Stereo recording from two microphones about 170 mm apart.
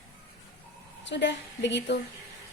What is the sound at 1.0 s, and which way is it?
Speech, 90° left.